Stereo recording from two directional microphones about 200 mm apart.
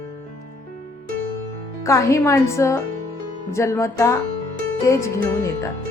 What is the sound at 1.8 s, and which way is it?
Speech, 15° left (ahead or behind).